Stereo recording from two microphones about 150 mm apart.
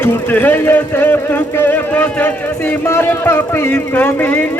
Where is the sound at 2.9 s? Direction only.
15° left (ahead or behind).